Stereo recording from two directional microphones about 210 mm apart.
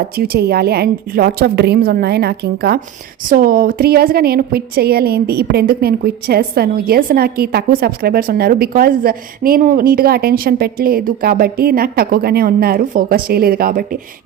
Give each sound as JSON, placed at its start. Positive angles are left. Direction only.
{"t": 0.2, "sound": "a woman's voice", "side_deg": -50}